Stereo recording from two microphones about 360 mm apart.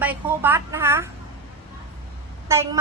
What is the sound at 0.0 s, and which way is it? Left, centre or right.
A woman's voice, centre.